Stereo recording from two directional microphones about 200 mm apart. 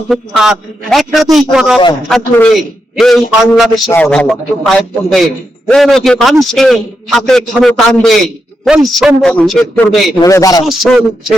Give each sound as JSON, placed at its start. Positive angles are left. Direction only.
{"t": 0.1, "sound": "a man's voice", "side_deg": 0}
{"t": 3.5, "sound": "a man's voice", "side_deg": 0}
{"t": 10.2, "sound": "speech", "side_deg": 15}
{"t": 10.7, "sound": "a man's voice", "side_deg": 0}